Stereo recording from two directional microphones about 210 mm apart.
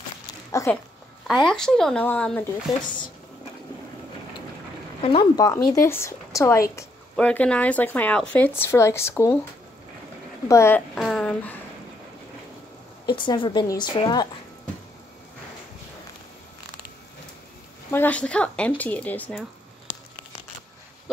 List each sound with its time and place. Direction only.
0.5 s a sound: 15° left (ahead or behind)
1.2 s speech: centre (ahead or behind)
5.0 s a woman's voice: 20° left (ahead or behind)
10.5 s speech: 10° left (ahead or behind)
13.0 s a woman's voice: 20° left (ahead or behind)
17.9 s a woman's voice: 5° left (ahead or behind)